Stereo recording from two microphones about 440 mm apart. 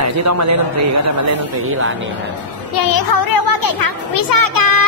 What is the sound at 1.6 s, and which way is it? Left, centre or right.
Speech, right.